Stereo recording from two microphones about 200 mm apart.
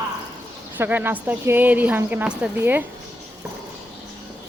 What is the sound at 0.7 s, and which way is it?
Speech, 10° right (ahead or behind).